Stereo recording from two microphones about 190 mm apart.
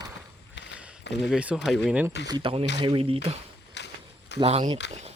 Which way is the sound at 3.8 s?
65° left (ahead or behind).